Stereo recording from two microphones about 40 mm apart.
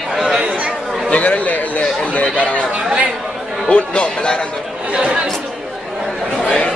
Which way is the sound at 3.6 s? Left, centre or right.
Left.